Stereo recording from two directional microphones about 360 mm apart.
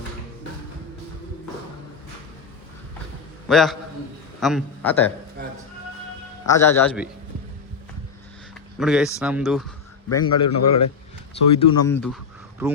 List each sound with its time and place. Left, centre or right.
3.5 s a man's voice: centre
6.5 s a man's voice: centre
8.8 s speech: centre
10.1 s a man's voice: left
11.5 s a man's voice: centre